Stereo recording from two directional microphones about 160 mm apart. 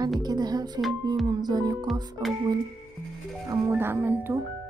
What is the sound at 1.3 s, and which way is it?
Speech, 25° right (ahead or behind).